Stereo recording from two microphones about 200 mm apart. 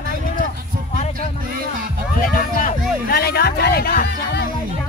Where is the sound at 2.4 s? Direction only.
45° left (ahead or behind).